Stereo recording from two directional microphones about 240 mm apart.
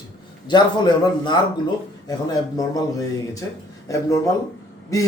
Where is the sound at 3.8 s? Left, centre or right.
Centre.